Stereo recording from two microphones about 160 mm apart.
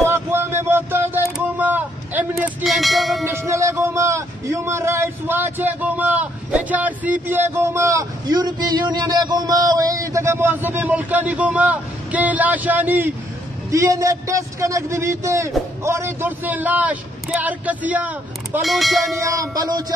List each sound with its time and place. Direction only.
0.0 s a sound: 15° right (ahead or behind)
2.6 s speech: centre (ahead or behind)
3.3 s a man's voice: 15° right (ahead or behind); by 19.1 s centre (ahead or behind)
19.2 s a man's voice: 20° right (ahead or behind)